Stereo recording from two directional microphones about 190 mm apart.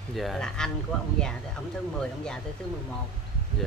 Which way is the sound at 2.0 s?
5° left (ahead or behind).